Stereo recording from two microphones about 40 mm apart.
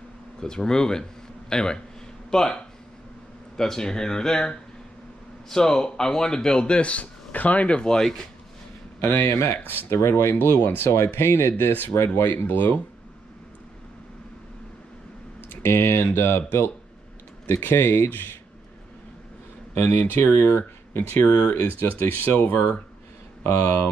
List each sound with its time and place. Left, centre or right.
0.4 s a man's voice: centre; by 7.8 s left
7.8 s a man's voice: centre
9.0 s speech: left
9.9 s speech: left
12.4 s speech: left
15.6 s speech: left
19.8 s speech: left
21.2 s speech: left
21.5 s speech: left
23.4 s speech: left